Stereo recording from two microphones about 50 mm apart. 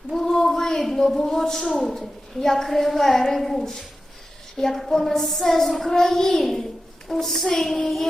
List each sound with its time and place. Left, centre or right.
0.1 s a sound: centre
0.3 s a man's voice: centre
4.5 s child singing: centre